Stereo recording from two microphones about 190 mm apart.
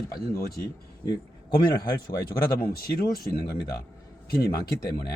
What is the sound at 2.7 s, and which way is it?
Speech, 55° left (ahead or behind).